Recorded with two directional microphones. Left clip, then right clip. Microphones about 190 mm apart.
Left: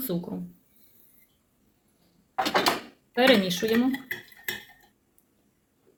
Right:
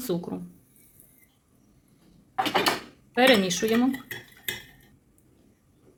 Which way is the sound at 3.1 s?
30° right (ahead or behind).